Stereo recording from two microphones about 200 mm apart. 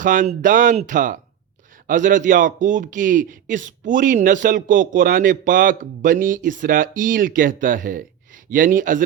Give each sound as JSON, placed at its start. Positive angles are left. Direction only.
{"t": 0.0, "sound": "a man's voice", "side_deg": -40}